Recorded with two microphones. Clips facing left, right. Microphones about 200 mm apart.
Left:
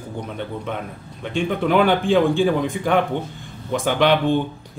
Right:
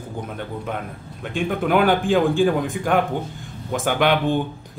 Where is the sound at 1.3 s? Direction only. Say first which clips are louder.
Left 1 dB; 5° right (ahead or behind).